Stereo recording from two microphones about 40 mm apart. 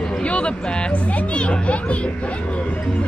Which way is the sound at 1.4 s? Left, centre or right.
Left.